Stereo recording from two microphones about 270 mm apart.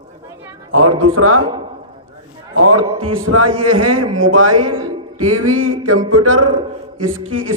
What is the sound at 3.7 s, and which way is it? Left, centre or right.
Speech, right.